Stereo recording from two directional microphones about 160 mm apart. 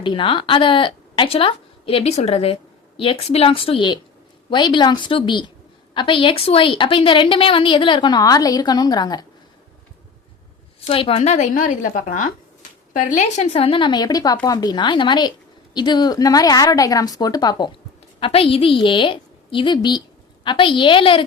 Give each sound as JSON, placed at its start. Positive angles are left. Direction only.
{"t": 0.0, "sound": "a woman's voice", "side_deg": 30}
{"t": 10.8, "sound": "a woman's voice", "side_deg": 35}